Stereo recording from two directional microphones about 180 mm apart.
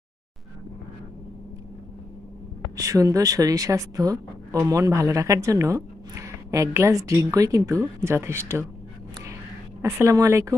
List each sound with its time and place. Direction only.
2.7 s speech: 20° right (ahead or behind)
9.8 s speech: 15° right (ahead or behind)